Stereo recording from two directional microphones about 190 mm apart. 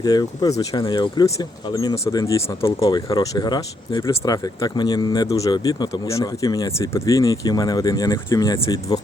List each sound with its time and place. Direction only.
0.0 s speech: 20° left (ahead or behind)